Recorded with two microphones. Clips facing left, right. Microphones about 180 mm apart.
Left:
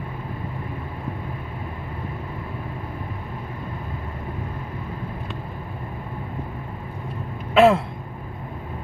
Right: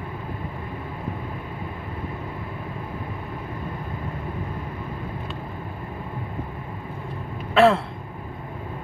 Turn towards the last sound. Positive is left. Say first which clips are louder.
# left 2 dB
turn(degrees=15)  # may be behind; listen again after turning